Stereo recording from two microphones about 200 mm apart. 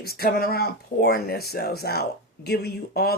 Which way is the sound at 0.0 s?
50° left (ahead or behind).